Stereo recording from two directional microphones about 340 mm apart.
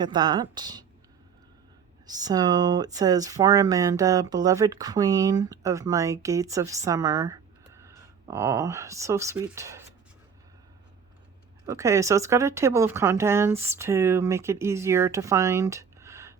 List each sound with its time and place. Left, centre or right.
0.0 s speech: centre
2.0 s speech: centre
11.6 s speech: centre